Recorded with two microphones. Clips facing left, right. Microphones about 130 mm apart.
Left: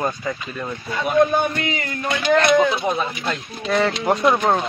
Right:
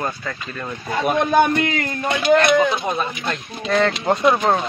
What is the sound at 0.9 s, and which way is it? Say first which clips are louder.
Speech: left 2 dB; 65° right (ahead or behind).